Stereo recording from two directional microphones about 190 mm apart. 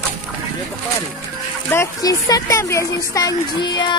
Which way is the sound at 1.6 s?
15° left (ahead or behind).